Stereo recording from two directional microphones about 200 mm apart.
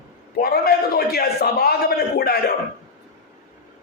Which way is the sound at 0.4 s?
50° left (ahead or behind).